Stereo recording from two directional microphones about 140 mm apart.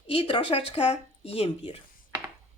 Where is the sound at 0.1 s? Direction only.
40° left (ahead or behind).